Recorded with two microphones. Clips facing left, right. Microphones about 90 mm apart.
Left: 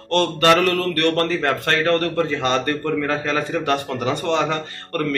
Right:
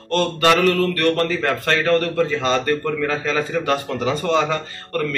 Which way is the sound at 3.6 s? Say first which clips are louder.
Right 1 dB; 55° left (ahead or behind).